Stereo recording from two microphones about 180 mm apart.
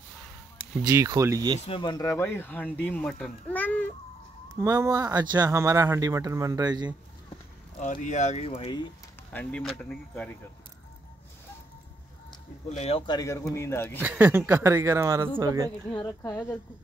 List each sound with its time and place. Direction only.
0.8 s speech: 20° right (ahead or behind)
1.7 s speech: 25° left (ahead or behind); by 3.9 s 10° left (ahead or behind)
4.6 s speech: 20° right (ahead or behind)
7.8 s speech: 45° left (ahead or behind)
9.3 s speech: 5° left (ahead or behind)
12.6 s speech: 35° left (ahead or behind); by 13.9 s 15° left (ahead or behind)
13.9 s speech: 10° right (ahead or behind)
15.9 s speech: 20° left (ahead or behind)